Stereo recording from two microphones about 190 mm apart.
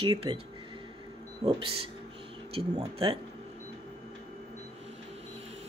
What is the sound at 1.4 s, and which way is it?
Speech, 20° right (ahead or behind).